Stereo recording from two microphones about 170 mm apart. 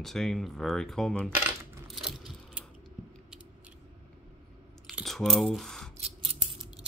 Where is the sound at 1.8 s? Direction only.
Centre (ahead or behind).